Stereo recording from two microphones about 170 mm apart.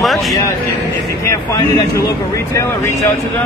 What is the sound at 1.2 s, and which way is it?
Speech, 15° left (ahead or behind).